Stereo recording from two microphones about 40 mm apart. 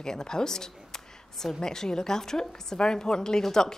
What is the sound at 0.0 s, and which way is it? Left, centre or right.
Speech, centre.